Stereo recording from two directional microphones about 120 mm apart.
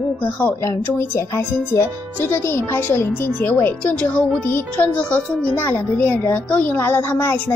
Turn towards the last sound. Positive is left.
turn(degrees=20)  # may be behind; listen again after turning